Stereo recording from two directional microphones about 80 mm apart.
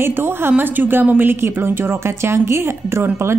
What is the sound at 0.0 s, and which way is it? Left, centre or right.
A woman's voice, right.